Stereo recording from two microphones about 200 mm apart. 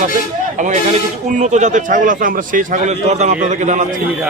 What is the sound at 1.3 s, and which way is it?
A man's voice, 35° right (ahead or behind).